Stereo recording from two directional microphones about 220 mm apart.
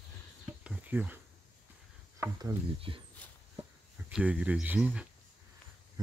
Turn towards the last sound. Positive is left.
turn(degrees=-5)  # may be behind; listen again after turning